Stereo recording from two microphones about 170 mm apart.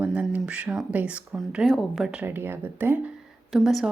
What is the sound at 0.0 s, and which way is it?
Speech, 10° right (ahead or behind).